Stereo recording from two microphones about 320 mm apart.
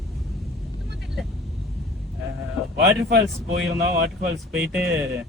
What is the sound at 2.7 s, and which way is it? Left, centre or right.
A man's voice, right.